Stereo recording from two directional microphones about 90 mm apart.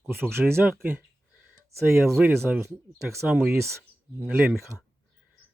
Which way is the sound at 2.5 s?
15° right (ahead or behind).